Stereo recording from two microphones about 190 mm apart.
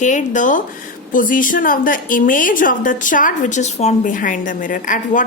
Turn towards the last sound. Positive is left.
turn(degrees=45)  # may be behind; listen again after turning